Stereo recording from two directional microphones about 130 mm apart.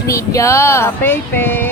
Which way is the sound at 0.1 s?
25° left (ahead or behind).